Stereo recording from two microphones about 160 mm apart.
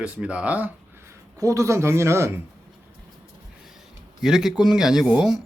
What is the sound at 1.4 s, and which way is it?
Speech, 20° right (ahead or behind).